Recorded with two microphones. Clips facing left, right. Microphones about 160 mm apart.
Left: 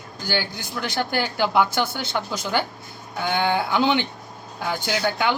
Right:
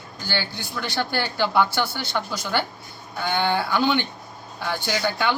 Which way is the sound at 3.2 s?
15° left (ahead or behind).